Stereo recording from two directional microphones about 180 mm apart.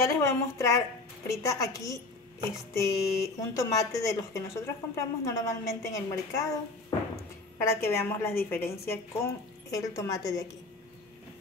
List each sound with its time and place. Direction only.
0.0 s speech: 15° left (ahead or behind)
7.5 s speech: 15° left (ahead or behind)